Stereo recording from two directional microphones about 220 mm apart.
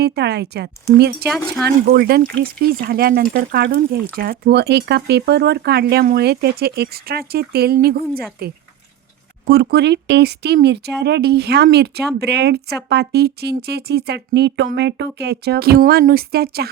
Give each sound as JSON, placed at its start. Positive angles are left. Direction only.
{"t": 0.0, "sound": "speech", "side_deg": -50}